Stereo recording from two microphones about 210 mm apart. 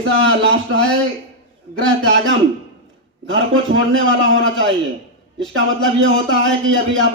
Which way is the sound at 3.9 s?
65° right (ahead or behind).